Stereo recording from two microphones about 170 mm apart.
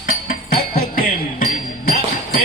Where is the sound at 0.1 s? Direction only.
60° left (ahead or behind).